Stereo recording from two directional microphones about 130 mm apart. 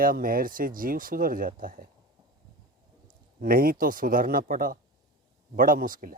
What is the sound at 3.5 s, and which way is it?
Speech, 90° right.